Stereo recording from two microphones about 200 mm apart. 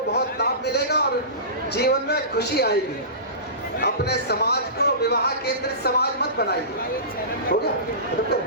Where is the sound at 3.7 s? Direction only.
55° left (ahead or behind).